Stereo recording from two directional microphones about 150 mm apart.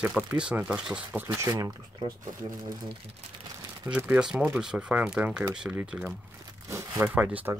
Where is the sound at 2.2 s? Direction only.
65° right (ahead or behind).